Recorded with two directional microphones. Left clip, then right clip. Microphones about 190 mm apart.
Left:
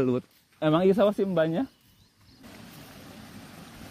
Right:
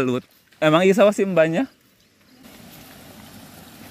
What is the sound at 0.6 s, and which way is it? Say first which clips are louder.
Speech: right 7 dB; 15° right (ahead or behind).